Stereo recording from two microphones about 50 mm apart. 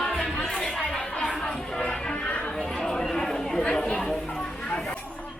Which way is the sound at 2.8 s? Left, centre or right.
Centre.